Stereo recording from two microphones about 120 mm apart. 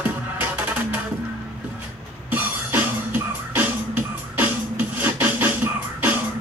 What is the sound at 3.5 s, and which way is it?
Music, 15° right (ahead or behind).